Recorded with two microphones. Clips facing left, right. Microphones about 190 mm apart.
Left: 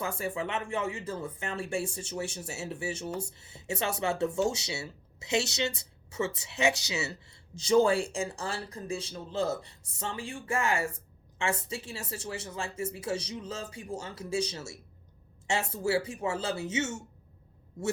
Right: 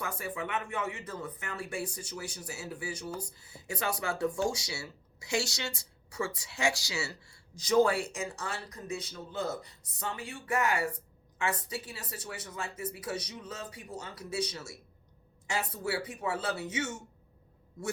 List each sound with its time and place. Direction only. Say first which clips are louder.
0.0 s speech: left 4 dB; 25° left (ahead or behind)